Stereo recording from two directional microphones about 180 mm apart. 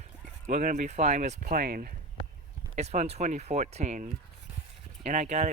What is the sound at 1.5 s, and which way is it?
Speech, 55° right (ahead or behind).